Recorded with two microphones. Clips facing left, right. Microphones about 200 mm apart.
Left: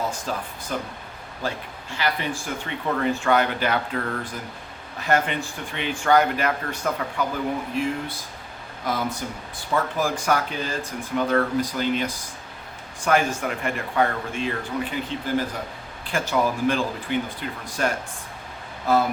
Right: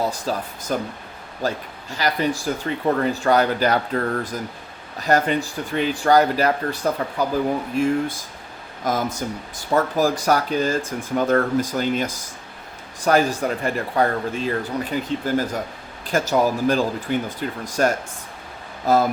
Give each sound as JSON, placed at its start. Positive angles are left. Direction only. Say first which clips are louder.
{"t": 0.1, "sound": "speech", "louder": "right 4 dB", "side_deg": -40}
{"t": 7.8, "sound": "speech", "louder": "right 6 dB", "side_deg": -45}
{"t": 16.0, "sound": "speech", "louder": "right 4 dB", "side_deg": -40}